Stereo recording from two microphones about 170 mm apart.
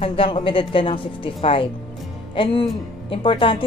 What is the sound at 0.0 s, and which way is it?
A woman's voice, 30° left (ahead or behind).